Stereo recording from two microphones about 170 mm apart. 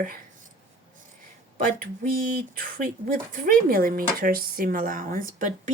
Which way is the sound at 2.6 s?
55° right (ahead or behind).